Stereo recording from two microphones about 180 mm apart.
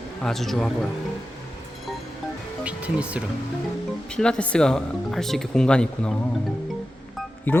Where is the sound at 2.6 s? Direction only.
5° right (ahead or behind).